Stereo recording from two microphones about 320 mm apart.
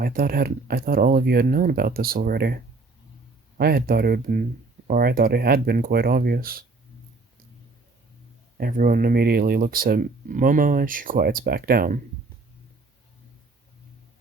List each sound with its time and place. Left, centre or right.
0.0 s speech: right
3.6 s speech: right
8.5 s speech: right